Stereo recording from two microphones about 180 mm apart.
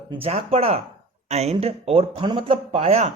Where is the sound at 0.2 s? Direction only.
35° right (ahead or behind).